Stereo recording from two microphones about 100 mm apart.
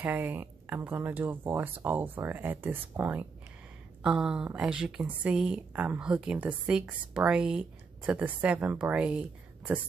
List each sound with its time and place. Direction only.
0.0 s speech: 20° right (ahead or behind)
4.0 s a woman's voice: 5° right (ahead or behind)